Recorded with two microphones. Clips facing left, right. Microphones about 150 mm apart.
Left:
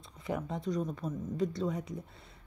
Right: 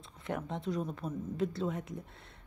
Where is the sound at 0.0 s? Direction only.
Centre (ahead or behind).